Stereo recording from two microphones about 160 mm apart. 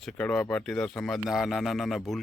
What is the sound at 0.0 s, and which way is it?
Speech, 5° left (ahead or behind).